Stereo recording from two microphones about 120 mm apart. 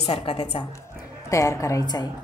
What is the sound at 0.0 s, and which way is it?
Speech, 55° left (ahead or behind).